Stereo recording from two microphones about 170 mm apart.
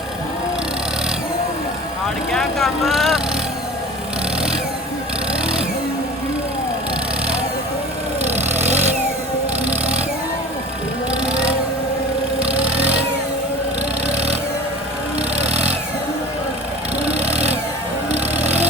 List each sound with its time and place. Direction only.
2.3 s vehicle: centre (ahead or behind)
8.2 s vehicle: 40° right (ahead or behind)
11.3 s vehicle: 5° right (ahead or behind)
15.4 s a sound: 10° right (ahead or behind)
17.2 s vehicle: 40° right (ahead or behind)